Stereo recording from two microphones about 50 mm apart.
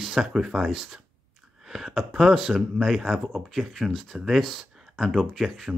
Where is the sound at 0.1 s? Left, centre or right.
Centre.